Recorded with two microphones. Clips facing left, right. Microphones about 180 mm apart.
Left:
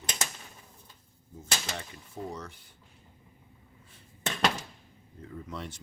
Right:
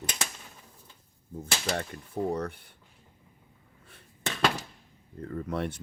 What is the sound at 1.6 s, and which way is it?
Speech, 55° right (ahead or behind).